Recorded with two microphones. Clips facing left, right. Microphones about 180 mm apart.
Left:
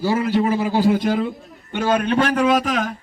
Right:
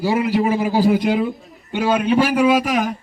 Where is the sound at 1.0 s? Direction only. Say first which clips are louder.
Right 2 dB; 20° right (ahead or behind).